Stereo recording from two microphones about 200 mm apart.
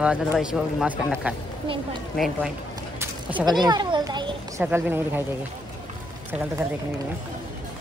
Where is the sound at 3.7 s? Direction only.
20° right (ahead or behind).